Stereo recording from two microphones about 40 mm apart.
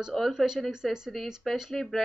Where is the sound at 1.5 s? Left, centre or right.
Centre.